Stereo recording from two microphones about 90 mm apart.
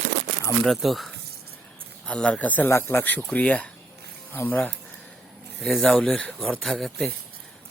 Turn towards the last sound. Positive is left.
turn(degrees=0)  # may be behind; listen again after turning